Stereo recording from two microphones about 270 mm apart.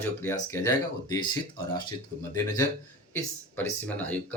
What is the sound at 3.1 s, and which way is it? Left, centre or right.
Speech, centre.